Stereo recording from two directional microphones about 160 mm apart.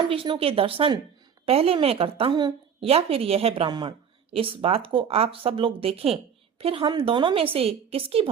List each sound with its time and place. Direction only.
0.1 s a woman's voice: 35° right (ahead or behind)